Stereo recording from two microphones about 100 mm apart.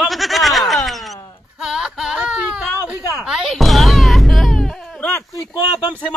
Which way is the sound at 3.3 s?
5° right (ahead or behind).